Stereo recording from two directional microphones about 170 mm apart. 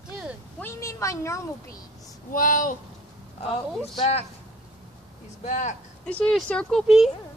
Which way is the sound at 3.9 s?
35° left (ahead or behind).